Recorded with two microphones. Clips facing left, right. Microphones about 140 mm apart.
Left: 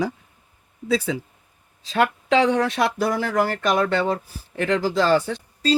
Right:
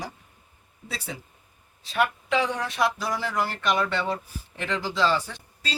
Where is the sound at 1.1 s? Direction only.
90° left.